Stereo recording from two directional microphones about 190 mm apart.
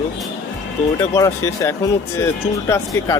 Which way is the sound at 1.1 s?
15° left (ahead or behind).